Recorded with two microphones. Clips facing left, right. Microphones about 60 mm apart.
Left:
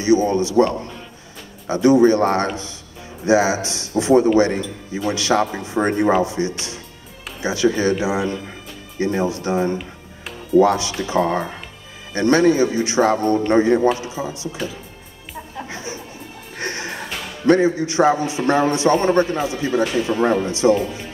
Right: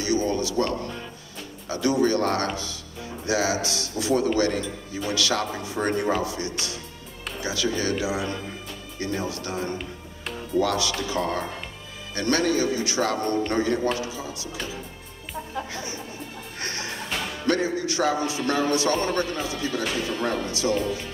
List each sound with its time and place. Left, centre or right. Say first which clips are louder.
0.0 s a man's voice: left 8 dB; left
15.7 s music: left 3 dB; left
17.5 s a man's voice: left 9 dB; left